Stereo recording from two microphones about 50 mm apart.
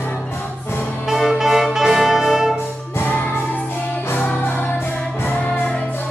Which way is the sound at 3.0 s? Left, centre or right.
Left.